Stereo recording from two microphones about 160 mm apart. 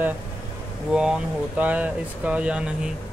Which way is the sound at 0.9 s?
5° right (ahead or behind).